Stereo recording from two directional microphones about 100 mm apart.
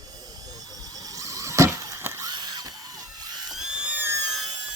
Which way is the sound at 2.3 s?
45° right (ahead or behind).